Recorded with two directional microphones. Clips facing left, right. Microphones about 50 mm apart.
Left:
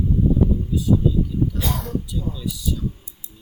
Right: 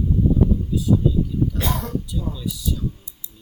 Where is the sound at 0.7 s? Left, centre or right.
Centre.